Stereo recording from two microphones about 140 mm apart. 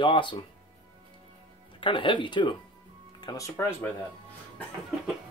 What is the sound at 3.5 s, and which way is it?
Speech, 15° left (ahead or behind).